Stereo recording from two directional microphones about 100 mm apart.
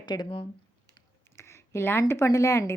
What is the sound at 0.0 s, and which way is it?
Speech, 45° left (ahead or behind).